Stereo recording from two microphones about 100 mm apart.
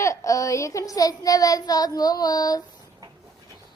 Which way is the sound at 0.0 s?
30° left (ahead or behind).